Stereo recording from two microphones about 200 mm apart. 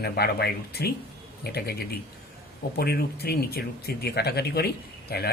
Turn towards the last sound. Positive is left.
turn(degrees=50)  # may be behind; listen again after turning